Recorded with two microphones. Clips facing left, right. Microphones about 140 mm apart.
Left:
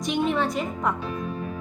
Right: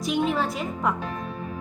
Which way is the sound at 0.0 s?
Centre (ahead or behind).